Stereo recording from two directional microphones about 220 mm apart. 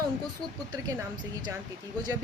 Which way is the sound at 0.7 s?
20° right (ahead or behind).